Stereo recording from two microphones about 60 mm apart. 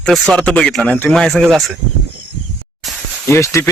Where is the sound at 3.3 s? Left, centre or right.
Left.